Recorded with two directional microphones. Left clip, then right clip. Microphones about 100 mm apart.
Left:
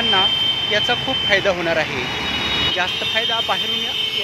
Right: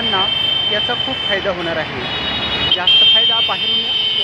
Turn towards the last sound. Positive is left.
turn(degrees=10)  # may be behind; listen again after turning